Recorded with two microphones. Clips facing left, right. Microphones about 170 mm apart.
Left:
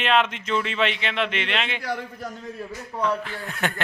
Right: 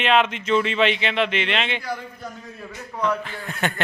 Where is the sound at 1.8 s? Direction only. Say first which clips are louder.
Left 1 dB; 85° left.